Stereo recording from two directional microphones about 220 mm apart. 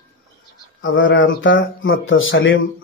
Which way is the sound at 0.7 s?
60° left (ahead or behind).